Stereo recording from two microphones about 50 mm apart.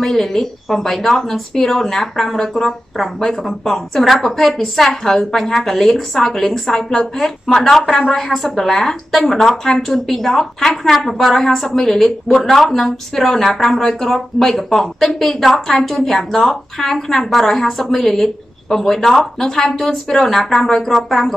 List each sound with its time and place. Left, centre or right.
0.0 s a woman's voice: centre